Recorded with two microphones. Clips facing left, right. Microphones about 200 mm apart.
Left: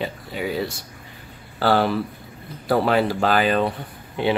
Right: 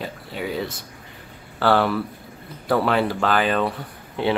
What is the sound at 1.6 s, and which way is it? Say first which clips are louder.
Speech: even; 30° left (ahead or behind).